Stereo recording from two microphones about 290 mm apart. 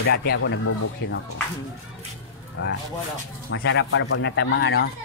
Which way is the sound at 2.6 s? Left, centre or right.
Left.